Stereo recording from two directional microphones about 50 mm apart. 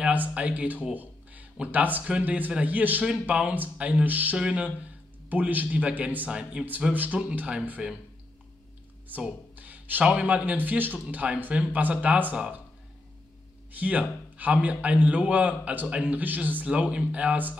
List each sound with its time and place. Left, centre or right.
0.0 s a man's voice: right
4.0 s speech: right
4.4 s a man's voice: right
7.8 s speech: centre
9.1 s speech: right
9.6 s a sound: right
10.1 s speech: right
11.5 s a man's voice: right
13.7 s a man's voice: right